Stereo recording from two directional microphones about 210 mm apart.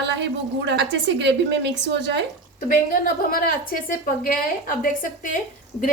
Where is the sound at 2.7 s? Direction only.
40° left (ahead or behind).